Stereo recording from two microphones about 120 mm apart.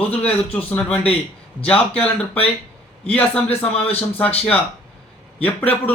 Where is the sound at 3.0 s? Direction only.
10° left (ahead or behind).